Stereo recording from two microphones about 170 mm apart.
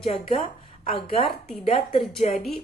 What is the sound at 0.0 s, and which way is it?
Speech, 40° left (ahead or behind).